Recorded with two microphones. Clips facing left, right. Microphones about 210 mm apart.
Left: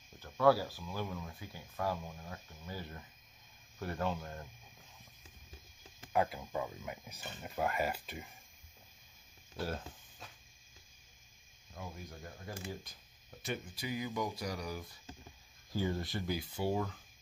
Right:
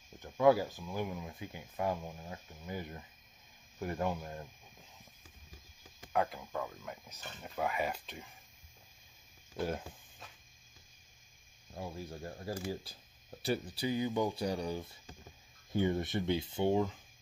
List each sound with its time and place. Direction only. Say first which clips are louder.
0.2 s speech: right 2 dB; 20° right (ahead or behind)
6.1 s speech: even; 5° left (ahead or behind)
9.6 s speech: right 3 dB; 15° right (ahead or behind)
11.7 s speech: right 5 dB; 30° right (ahead or behind)